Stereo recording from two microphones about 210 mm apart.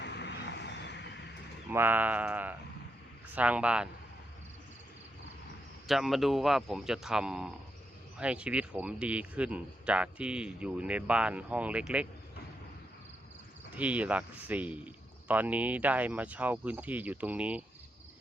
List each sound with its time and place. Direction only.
0.0 s vehicle: 55° left (ahead or behind)
1.7 s speech: 10° right (ahead or behind)
5.9 s speech: centre (ahead or behind)
13.7 s speech: 5° right (ahead or behind)